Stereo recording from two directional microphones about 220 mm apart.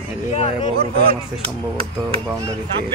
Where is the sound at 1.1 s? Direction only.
25° right (ahead or behind).